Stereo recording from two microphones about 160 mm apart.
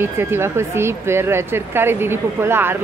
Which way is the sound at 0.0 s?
15° right (ahead or behind).